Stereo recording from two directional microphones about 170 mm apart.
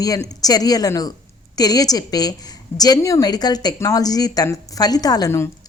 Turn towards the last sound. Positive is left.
turn(degrees=15)  # may be behind; listen again after turning